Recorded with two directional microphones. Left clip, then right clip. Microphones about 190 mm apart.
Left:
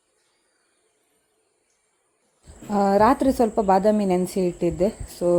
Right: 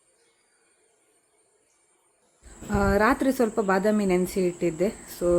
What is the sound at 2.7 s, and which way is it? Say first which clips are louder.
Speech: left 4 dB; 10° left (ahead or behind).